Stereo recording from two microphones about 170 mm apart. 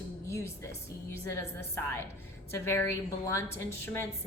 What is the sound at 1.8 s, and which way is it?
A woman's voice, 15° left (ahead or behind).